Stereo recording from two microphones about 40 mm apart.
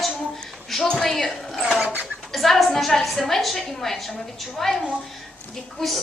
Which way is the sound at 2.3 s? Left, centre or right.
Centre.